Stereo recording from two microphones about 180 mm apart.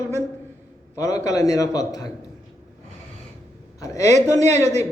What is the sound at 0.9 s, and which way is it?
A man's voice, 20° left (ahead or behind).